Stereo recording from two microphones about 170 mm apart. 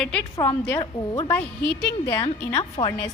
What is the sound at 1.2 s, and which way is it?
Speech, 10° left (ahead or behind).